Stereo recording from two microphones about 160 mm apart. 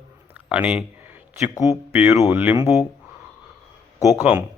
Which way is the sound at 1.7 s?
5° right (ahead or behind).